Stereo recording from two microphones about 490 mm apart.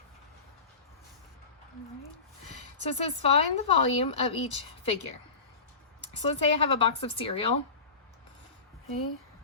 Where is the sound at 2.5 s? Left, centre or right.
Centre.